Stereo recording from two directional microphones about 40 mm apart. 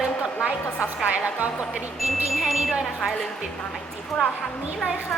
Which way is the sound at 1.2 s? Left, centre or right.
Right.